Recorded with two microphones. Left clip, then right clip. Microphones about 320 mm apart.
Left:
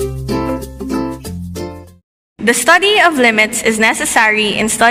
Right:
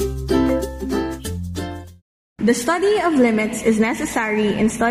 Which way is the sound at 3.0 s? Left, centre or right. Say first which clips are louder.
Left 8 dB; left.